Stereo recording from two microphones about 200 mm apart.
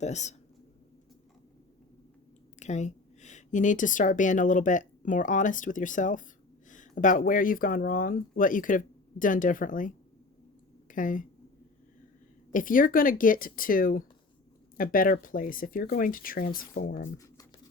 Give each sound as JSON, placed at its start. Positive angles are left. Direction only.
{"t": 0.0, "sound": "speech", "side_deg": 35}
{"t": 2.6, "sound": "a woman's voice", "side_deg": 35}
{"t": 12.5, "sound": "speech", "side_deg": 40}